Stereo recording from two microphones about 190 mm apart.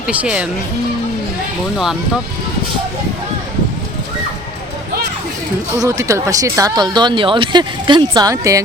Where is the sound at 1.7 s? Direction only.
Centre (ahead or behind).